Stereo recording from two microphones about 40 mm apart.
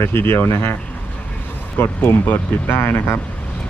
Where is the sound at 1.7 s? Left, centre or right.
Left.